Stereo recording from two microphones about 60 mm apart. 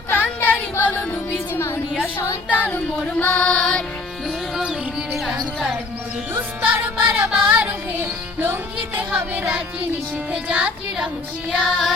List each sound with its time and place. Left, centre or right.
0.1 s a sound: left
0.9 s music: left
2.5 s child singing: left
3.3 s music: centre
6.3 s music: right
7.0 s music: centre
10.3 s speech: centre
11.5 s music: centre